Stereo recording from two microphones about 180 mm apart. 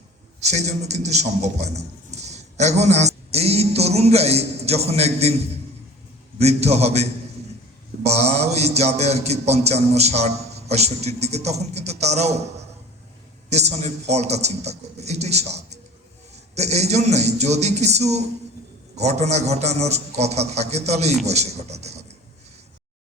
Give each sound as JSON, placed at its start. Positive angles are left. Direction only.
{"t": 0.3, "sound": "a man's voice", "side_deg": -40}
{"t": 6.4, "sound": "a man's voice", "side_deg": -35}